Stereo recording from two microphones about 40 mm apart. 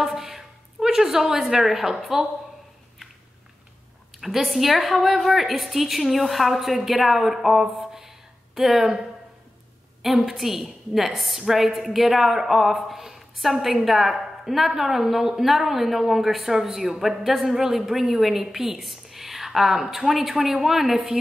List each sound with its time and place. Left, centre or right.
0.0 s a sound: centre
4.2 s a woman's voice: centre
10.0 s a woman's voice: centre